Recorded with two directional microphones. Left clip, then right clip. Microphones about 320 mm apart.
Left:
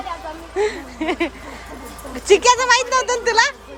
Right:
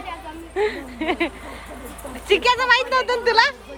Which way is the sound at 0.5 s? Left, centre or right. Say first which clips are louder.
Left 2 dB; centre.